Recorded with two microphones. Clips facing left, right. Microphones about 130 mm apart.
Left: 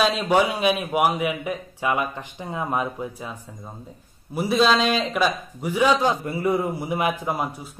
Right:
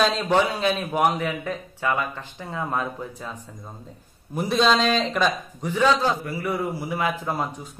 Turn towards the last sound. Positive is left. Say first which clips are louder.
# left 1 dB
turn(degrees=15)  # may be behind; listen again after turning